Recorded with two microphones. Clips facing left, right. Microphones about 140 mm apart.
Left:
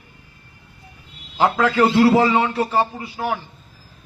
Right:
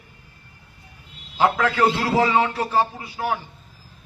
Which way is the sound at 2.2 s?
25° left (ahead or behind).